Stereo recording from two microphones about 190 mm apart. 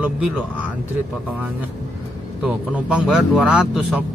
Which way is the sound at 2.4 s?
5° right (ahead or behind).